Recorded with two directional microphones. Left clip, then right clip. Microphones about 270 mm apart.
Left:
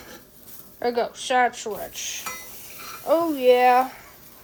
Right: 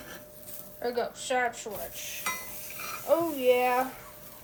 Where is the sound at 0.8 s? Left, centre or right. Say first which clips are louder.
Left 7 dB; left.